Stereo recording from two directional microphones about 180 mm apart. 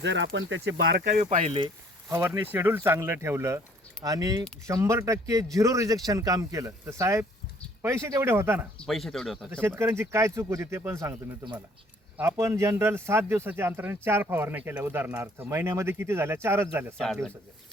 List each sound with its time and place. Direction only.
0.0 s speech: 80° right
0.3 s speech: 90° right; by 1.2 s 65° right (ahead or behind)
1.2 s speech: 40° right (ahead or behind)
2.0 s speech: 15° right (ahead or behind)
8.8 s speech: centre (ahead or behind)
9.5 s speech: 15° right (ahead or behind)